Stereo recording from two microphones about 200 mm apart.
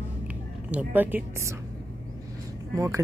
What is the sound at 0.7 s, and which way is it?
Speech, 10° right (ahead or behind).